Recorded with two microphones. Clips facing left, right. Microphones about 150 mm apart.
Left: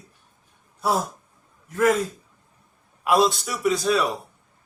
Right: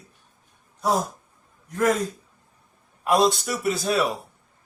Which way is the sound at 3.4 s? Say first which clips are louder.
Left 2 dB; 50° right (ahead or behind).